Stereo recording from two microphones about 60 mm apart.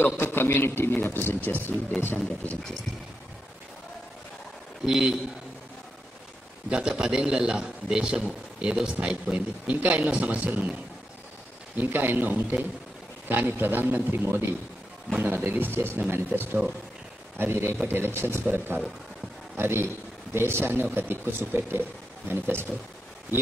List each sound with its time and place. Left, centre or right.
0.2 s speech: left
4.8 s a man's voice: centre
6.7 s a man's voice: centre; by 16.5 s right
17.4 s a man's voice: right